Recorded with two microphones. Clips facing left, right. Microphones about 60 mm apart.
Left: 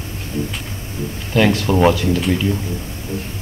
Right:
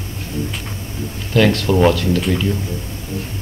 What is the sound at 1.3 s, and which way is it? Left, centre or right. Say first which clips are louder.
Speech: right 1 dB; centre.